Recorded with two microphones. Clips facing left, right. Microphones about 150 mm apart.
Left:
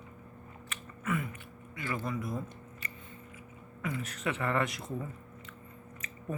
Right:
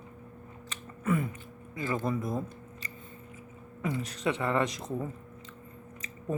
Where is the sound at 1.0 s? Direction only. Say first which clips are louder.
Right 5 dB; 35° right (ahead or behind).